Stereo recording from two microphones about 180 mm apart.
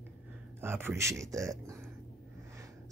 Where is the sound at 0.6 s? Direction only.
10° right (ahead or behind).